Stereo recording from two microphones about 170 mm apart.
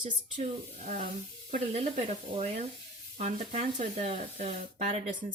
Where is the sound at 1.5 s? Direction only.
45° right (ahead or behind).